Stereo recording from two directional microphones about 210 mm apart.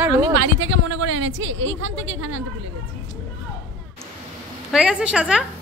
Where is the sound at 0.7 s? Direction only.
75° right (ahead or behind).